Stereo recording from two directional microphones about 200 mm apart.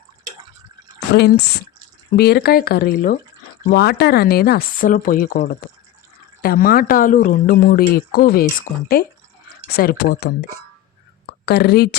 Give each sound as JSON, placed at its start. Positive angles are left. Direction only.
{"t": 1.1, "sound": "speech", "side_deg": 55}
{"t": 9.7, "sound": "speech", "side_deg": 50}
{"t": 11.4, "sound": "speech", "side_deg": 55}